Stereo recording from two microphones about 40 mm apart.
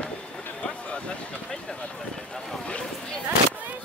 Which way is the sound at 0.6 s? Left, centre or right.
Left.